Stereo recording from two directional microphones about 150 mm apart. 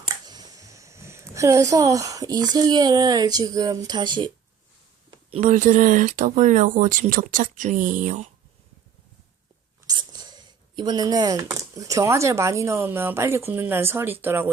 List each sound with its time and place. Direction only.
0.3 s speech: 25° right (ahead or behind)
5.4 s speech: 55° right (ahead or behind)
9.8 s speech: 25° right (ahead or behind)